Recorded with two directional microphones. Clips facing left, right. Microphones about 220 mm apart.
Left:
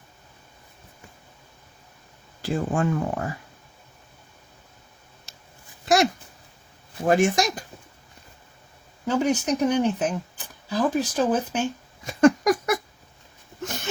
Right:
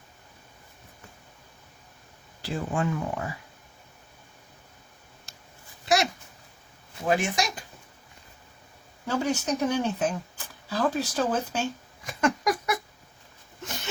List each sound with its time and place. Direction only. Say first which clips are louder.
2.4 s speech: left 4 dB; 45° left (ahead or behind)
7.0 s speech: left 6 dB; 50° left (ahead or behind)
9.0 s speech: left 4 dB; 15° left (ahead or behind)
12.2 s cat: left 8 dB; 45° left (ahead or behind)